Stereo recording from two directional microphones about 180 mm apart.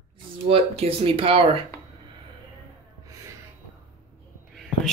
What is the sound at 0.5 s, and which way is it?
Speech, 30° right (ahead or behind).